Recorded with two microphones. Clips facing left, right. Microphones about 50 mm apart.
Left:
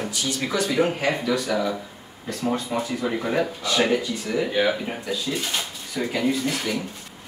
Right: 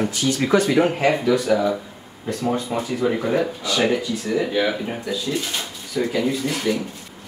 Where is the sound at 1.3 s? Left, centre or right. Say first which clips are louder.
Right 5 dB; centre.